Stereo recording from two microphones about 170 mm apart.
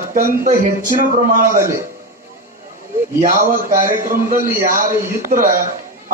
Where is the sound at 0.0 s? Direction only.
55° right (ahead or behind).